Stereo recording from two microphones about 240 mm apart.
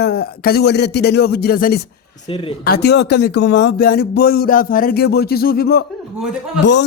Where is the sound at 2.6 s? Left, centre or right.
Left.